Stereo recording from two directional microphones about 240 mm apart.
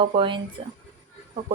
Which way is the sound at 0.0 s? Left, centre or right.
Right.